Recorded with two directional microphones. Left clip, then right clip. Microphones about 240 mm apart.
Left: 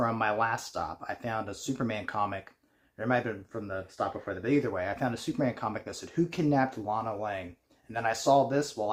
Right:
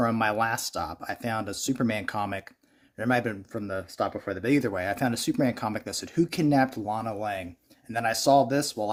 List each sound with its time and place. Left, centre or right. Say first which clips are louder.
0.0 s speech: right 3 dB; right